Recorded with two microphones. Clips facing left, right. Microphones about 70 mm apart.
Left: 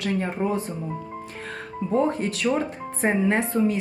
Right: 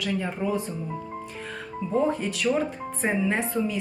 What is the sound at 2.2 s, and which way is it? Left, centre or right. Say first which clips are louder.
Speech: left 1 dB; left.